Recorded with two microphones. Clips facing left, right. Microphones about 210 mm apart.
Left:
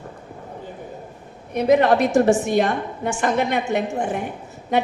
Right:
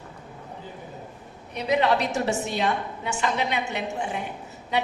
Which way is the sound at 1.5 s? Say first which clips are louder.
Left 7 dB; 50° left (ahead or behind).